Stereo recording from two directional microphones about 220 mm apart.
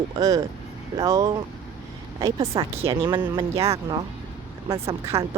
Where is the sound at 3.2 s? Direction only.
15° right (ahead or behind).